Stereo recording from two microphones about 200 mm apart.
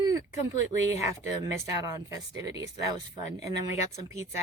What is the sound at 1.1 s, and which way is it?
Speech, 15° right (ahead or behind).